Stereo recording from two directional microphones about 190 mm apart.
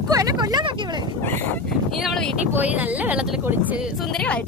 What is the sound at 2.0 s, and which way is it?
Speech, centre (ahead or behind).